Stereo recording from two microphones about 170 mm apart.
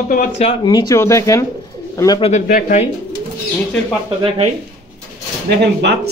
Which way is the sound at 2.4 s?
50° left (ahead or behind).